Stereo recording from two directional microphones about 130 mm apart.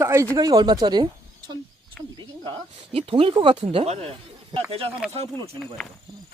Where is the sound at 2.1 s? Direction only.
40° right (ahead or behind).